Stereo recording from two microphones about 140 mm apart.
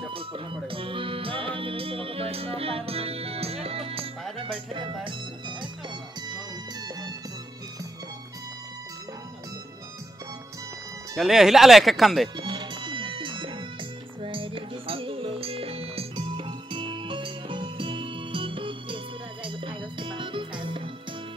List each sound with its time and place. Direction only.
0.1 s music: 40° right (ahead or behind)
4.5 s speech: 35° right (ahead or behind)
11.1 s speech: 5° right (ahead or behind)
12.4 s music: 35° right (ahead or behind)